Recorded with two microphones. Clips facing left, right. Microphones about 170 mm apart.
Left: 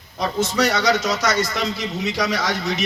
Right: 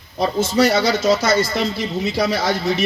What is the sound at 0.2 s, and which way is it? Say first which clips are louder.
A man's voice: right 4 dB; 30° right (ahead or behind).